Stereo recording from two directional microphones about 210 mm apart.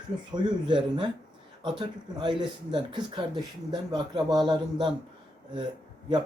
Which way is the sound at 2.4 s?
20° right (ahead or behind).